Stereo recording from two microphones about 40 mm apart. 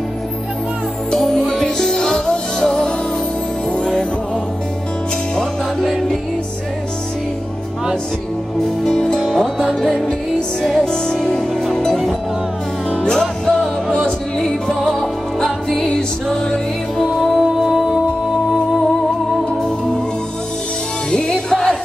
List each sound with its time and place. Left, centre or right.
1.2 s music: centre
5.3 s music: centre
8.8 s music: centre
10.9 s music: centre
13.0 s music: centre
17.0 s music: centre
17.4 s music: centre
21.1 s music: centre